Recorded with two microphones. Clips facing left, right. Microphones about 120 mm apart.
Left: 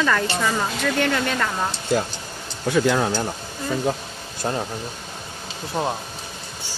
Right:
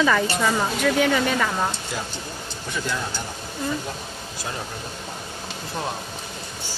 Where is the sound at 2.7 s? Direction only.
65° left (ahead or behind).